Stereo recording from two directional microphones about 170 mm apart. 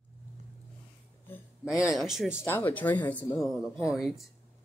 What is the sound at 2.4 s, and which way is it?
Speech, 10° left (ahead or behind).